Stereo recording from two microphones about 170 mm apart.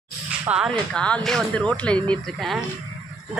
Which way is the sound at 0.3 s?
5° right (ahead or behind).